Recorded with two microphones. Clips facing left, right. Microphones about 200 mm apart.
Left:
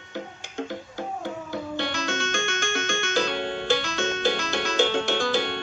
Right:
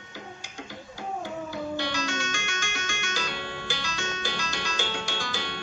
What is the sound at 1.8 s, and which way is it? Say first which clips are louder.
Music: left 2 dB; 55° left (ahead or behind).